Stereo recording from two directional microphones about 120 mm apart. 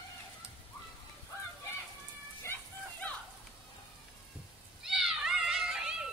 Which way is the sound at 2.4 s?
20° left (ahead or behind).